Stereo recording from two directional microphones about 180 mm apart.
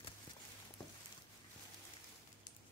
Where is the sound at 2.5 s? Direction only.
45° left (ahead or behind).